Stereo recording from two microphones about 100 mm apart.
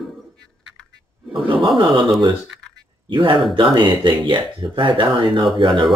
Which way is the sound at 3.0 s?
55° right (ahead or behind).